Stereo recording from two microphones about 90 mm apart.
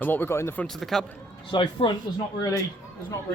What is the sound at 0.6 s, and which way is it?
Speech, 5° left (ahead or behind).